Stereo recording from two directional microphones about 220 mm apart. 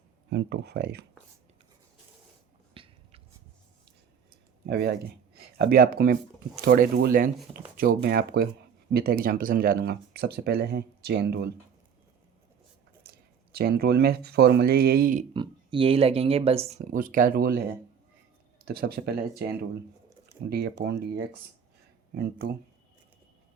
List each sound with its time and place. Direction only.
0.3 s speech: 50° right (ahead or behind)
2.7 s a sound: 25° right (ahead or behind)
4.7 s speech: 45° right (ahead or behind)
13.0 s speech: 45° right (ahead or behind)
15.3 s speech: 20° right (ahead or behind); by 17.6 s 40° right (ahead or behind)
18.6 s speech: 45° right (ahead or behind)
22.1 s speech: 45° right (ahead or behind)